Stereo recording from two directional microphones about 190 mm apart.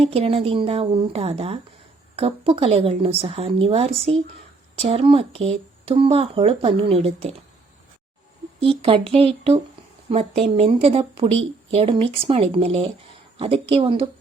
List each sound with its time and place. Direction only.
0.0 s speech: 30° right (ahead or behind)
8.6 s speech: 30° right (ahead or behind)